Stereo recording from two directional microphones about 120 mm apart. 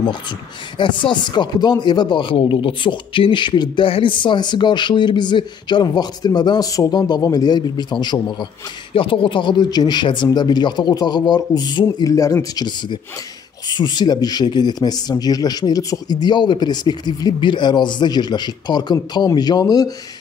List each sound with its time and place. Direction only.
0.7 s speech: 40° left (ahead or behind)